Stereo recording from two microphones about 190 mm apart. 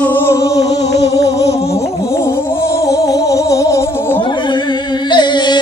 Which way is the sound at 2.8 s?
20° left (ahead or behind).